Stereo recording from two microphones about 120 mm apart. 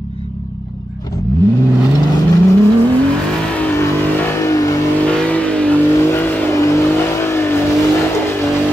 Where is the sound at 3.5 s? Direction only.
15° left (ahead or behind).